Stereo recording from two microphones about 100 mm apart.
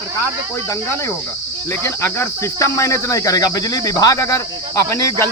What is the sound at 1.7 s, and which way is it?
Cricket, 20° left (ahead or behind).